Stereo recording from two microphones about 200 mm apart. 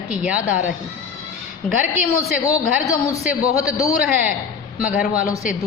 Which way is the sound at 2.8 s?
15° left (ahead or behind).